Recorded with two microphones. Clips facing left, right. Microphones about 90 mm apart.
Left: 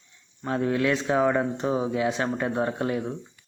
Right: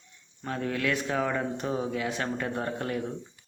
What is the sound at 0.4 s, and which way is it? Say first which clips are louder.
A man's voice: left 6 dB; 25° left (ahead or behind).